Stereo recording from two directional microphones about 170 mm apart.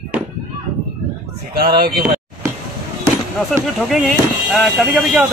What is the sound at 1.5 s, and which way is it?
Speech, 60° right (ahead or behind).